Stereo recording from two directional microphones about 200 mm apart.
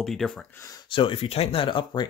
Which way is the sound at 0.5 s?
20° left (ahead or behind).